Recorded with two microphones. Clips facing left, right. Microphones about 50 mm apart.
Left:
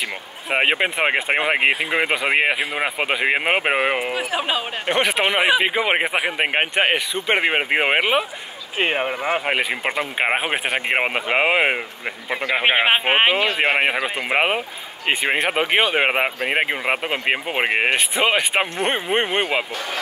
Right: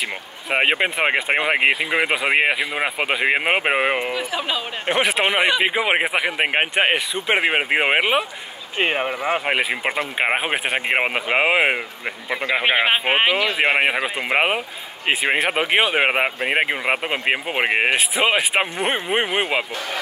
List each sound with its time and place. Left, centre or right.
0.5 s speech: centre
4.1 s speech: left
4.8 s speech: centre
12.5 s speech: centre
13.3 s speech: left
14.0 s speech: centre